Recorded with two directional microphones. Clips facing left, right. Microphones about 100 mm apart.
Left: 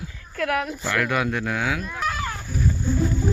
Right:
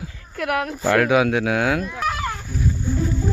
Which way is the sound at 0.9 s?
80° right.